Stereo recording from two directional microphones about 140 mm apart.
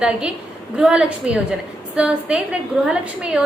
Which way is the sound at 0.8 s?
5° right (ahead or behind).